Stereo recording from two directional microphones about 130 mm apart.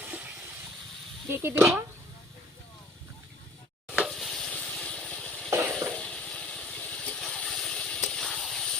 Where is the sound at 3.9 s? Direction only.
Centre (ahead or behind).